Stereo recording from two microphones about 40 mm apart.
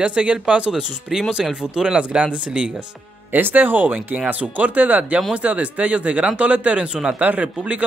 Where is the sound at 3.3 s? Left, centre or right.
Right.